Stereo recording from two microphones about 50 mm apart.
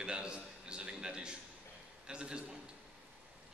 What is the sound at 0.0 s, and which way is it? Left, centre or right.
A man's voice, centre.